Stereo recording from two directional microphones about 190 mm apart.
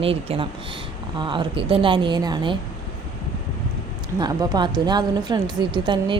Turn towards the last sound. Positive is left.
turn(degrees=-25)  # may be behind; listen again after turning